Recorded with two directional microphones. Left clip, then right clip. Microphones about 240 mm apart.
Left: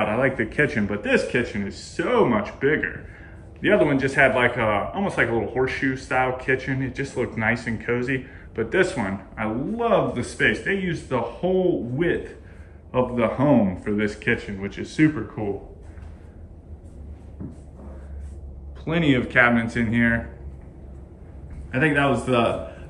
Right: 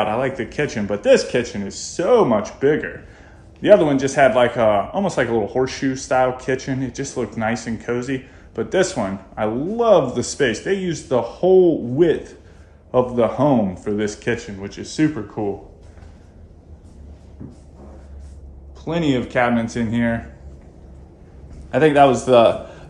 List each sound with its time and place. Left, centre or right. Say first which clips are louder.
0.0 s a man's voice: right 1 dB; centre
18.9 s a man's voice: right 1 dB; centre
21.6 s a man's voice: right 8 dB; centre